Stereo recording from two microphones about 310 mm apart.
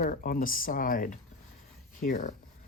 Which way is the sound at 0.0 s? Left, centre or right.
Left.